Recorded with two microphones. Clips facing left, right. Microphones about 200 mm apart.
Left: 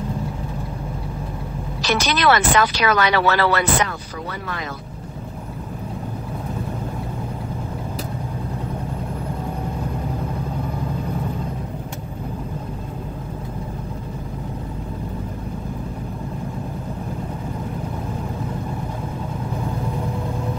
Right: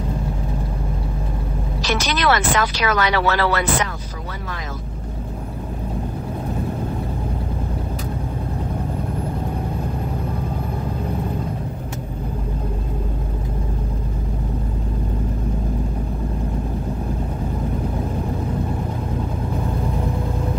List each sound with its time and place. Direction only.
2.0 s speech: 65° left (ahead or behind)